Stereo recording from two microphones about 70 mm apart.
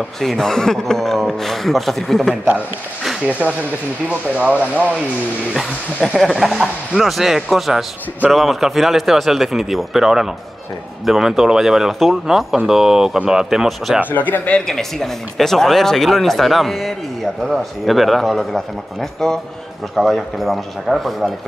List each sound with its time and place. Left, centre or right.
0.2 s speech: centre
3.3 s speech: right
6.1 s speech: centre
14.1 s speech: left
14.7 s speech: centre